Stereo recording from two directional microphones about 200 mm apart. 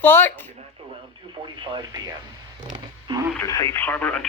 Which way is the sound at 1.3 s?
25° right (ahead or behind).